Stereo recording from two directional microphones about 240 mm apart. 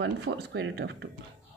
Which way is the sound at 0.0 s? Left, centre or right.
Right.